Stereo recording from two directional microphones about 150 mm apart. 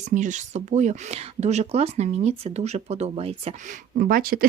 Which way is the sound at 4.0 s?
75° right (ahead or behind).